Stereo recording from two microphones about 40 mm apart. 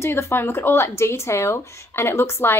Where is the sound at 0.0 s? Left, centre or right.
Left.